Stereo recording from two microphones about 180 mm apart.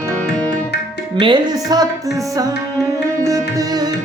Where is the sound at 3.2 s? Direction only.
20° right (ahead or behind).